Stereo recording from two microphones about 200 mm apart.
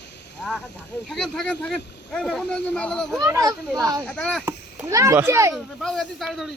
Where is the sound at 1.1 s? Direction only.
Centre (ahead or behind).